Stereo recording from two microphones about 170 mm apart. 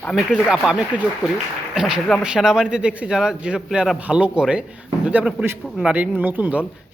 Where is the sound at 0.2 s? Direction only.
5° right (ahead or behind).